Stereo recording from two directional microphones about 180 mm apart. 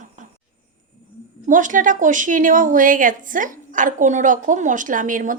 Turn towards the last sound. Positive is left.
turn(degrees=-45)  # may be behind; listen again after turning